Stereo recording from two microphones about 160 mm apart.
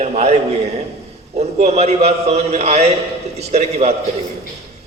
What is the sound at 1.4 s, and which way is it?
A man's voice, 40° right (ahead or behind).